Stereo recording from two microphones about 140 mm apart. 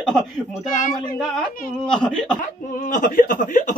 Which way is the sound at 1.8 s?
5° left (ahead or behind).